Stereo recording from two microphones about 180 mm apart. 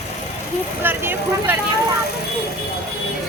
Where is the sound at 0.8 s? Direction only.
10° right (ahead or behind).